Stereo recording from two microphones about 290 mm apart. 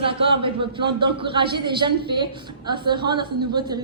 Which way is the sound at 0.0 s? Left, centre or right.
Centre.